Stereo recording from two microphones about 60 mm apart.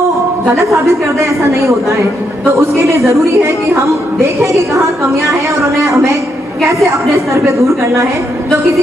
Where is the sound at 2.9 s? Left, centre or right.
Right.